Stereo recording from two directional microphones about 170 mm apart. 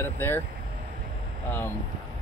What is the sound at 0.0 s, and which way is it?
Speech, 15° left (ahead or behind).